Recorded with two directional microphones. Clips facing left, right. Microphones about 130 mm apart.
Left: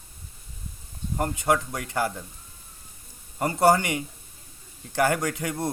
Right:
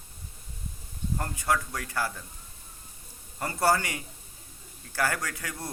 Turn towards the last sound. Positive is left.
turn(degrees=25)  # may be behind; listen again after turning